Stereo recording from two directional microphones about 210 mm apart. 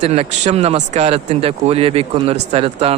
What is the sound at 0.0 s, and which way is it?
Speech, 30° right (ahead or behind).